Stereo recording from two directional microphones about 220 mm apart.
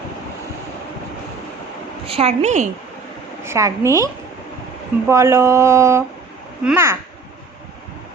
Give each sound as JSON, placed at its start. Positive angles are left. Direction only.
{"t": 2.0, "sound": "a woman's voice", "side_deg": -25}
{"t": 3.4, "sound": "speech", "side_deg": -10}